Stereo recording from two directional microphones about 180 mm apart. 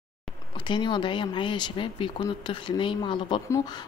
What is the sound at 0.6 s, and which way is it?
Speech, 25° left (ahead or behind).